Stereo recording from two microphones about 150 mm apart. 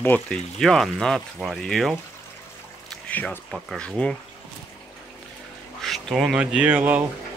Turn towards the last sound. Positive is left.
turn(degrees=-10)  # may be behind; listen again after turning